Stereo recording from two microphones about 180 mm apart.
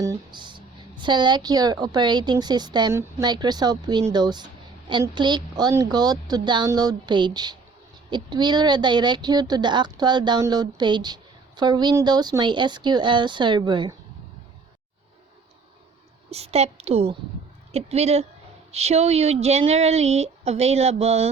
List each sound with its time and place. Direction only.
0.0 s a woman's voice: 20° right (ahead or behind)
16.3 s a woman's voice: 35° right (ahead or behind)